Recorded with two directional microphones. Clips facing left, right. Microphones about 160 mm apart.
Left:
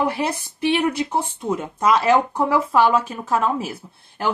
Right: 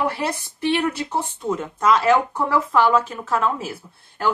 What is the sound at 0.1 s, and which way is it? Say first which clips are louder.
A woman's voice: left 2 dB; 15° left (ahead or behind).